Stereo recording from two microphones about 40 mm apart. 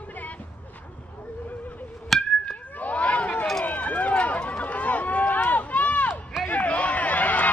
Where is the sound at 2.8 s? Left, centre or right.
Left.